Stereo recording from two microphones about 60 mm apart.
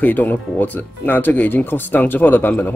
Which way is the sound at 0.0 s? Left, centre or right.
Left.